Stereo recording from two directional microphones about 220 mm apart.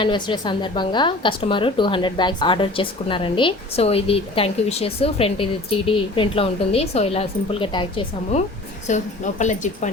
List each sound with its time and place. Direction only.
0.0 s a woman's voice: 20° left (ahead or behind)